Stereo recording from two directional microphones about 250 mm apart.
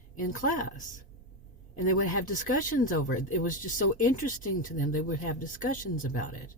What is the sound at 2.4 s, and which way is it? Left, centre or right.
Speech, left.